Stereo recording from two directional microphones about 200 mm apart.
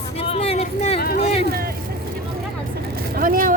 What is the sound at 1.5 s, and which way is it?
Vehicle, 50° right (ahead or behind).